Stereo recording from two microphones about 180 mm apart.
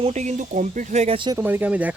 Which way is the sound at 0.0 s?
40° right (ahead or behind).